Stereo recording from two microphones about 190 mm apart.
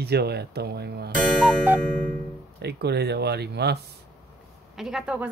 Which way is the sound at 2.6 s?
60° right (ahead or behind).